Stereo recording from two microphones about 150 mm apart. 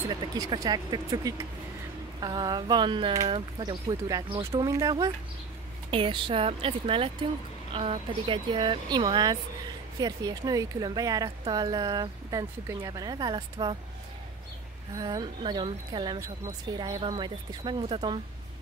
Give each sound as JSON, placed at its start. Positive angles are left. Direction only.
{"t": 0.1, "sound": "speech", "side_deg": -30}
{"t": 5.9, "sound": "speech", "side_deg": -35}
{"t": 15.0, "sound": "speech", "side_deg": -30}